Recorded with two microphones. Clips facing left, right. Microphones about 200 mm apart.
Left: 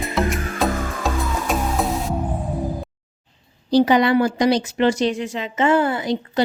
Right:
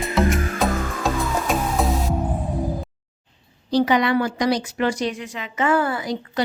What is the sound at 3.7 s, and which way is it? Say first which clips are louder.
A woman's voice: left 3 dB; 30° left (ahead or behind).